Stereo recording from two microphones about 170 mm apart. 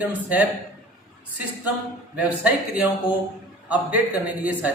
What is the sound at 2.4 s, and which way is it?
A man's voice, 10° right (ahead or behind).